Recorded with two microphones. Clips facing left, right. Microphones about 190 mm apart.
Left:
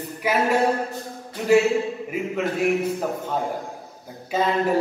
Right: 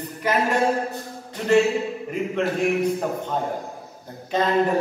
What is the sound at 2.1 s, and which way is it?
A man's voice, 5° left (ahead or behind).